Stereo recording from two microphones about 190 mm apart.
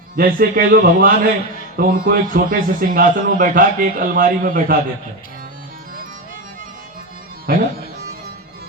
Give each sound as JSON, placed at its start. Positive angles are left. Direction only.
{"t": 0.2, "sound": "a man's voice", "side_deg": -50}
{"t": 7.5, "sound": "speech", "side_deg": -55}